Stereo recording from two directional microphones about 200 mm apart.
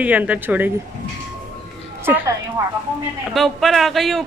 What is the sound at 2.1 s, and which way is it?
Speech, 10° right (ahead or behind).